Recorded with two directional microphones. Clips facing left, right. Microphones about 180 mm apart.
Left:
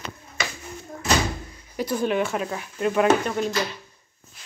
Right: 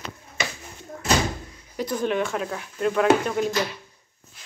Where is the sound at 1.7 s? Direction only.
5° left (ahead or behind).